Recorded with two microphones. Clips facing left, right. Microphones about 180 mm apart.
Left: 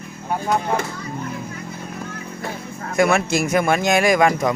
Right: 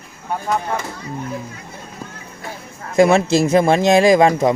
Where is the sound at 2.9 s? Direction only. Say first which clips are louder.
Right 5 dB; 25° right (ahead or behind).